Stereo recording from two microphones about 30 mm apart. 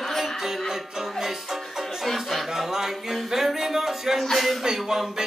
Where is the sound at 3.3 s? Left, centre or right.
Centre.